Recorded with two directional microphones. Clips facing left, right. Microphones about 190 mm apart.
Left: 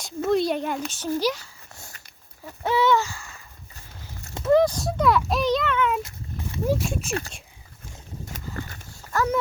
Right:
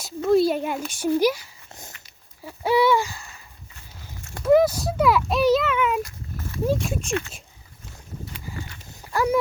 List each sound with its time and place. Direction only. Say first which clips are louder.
0.0 s speech: right 4 dB; 5° right (ahead or behind)
2.6 s a sound: right 2 dB; 10° right (ahead or behind)
4.5 s speech: right 2 dB; 5° right (ahead or behind)
6.0 s horse: right 3 dB; 20° left (ahead or behind)
6.7 s speech: even; centre (ahead or behind)
7.1 s speech: right 3 dB; 35° left (ahead or behind)
8.3 s a sound: left 5 dB; 45° left (ahead or behind)
9.1 s speech: right 2 dB; 10° right (ahead or behind)